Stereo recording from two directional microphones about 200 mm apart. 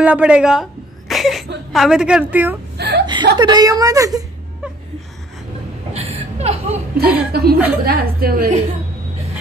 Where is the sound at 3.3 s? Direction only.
20° right (ahead or behind).